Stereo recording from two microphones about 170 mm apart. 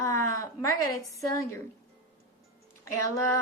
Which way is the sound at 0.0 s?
20° left (ahead or behind).